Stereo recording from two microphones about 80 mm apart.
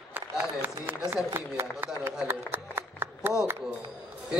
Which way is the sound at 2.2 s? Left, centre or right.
Right.